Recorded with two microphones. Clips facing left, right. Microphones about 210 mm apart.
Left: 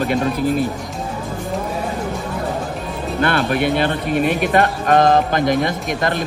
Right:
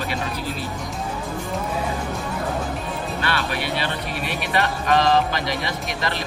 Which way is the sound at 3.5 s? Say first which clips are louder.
Left 8 dB; 50° left (ahead or behind).